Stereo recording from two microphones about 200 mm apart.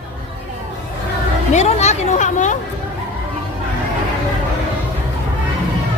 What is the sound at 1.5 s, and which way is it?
Speech, 35° left (ahead or behind).